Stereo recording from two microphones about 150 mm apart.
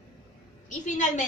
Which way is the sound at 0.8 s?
55° left (ahead or behind).